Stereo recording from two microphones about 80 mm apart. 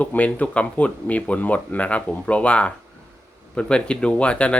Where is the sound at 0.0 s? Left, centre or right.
Centre.